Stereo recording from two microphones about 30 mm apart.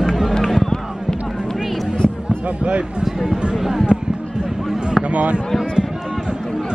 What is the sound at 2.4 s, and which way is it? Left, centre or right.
Speech, right.